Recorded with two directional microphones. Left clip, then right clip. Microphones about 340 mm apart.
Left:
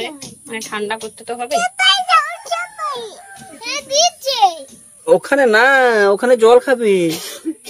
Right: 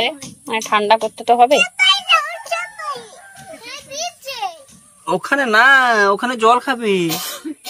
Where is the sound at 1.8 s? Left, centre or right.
Centre.